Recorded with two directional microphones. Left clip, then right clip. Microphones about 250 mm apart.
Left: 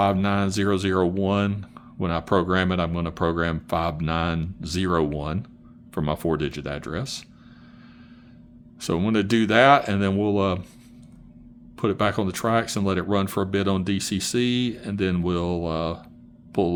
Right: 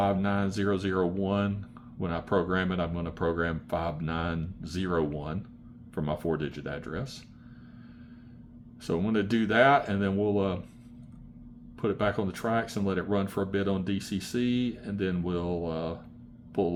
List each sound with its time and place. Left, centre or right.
0.0 s speech: left
8.8 s speech: left
11.8 s speech: left